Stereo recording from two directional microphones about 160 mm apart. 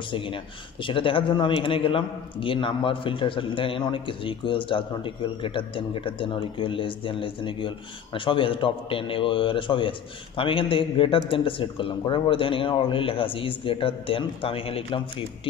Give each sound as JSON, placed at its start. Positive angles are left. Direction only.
{"t": 0.8, "sound": "a man's voice", "side_deg": 35}